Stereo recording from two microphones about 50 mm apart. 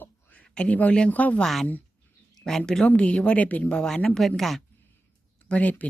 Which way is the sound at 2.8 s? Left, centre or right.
Left.